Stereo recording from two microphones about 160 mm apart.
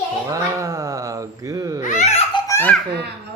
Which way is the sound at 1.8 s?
50° left (ahead or behind).